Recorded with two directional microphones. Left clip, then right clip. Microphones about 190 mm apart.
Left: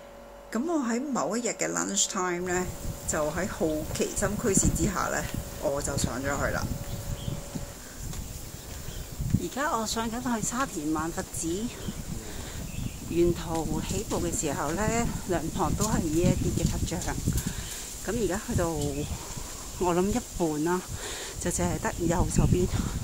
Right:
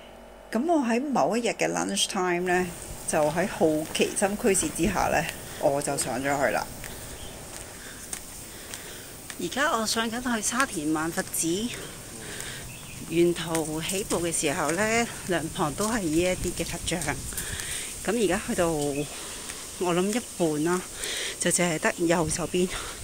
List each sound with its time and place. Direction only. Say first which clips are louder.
0.5 s a woman's voice: right 5 dB; 10° right (ahead or behind)
9.5 s speech: right 4 dB; 5° right (ahead or behind)
13.1 s a woman's voice: right 2 dB; centre (ahead or behind)
19.8 s speech: even; 5° left (ahead or behind); by 22.3 s 10° right (ahead or behind)
22.3 s speech: right 1 dB; centre (ahead or behind)